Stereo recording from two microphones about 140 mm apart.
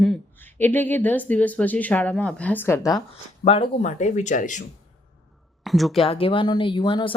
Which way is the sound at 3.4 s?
45° left (ahead or behind).